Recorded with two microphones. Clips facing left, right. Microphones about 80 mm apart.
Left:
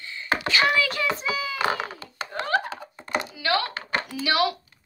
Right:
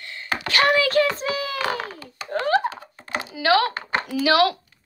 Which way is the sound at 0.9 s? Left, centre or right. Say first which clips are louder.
Right 6 dB; right.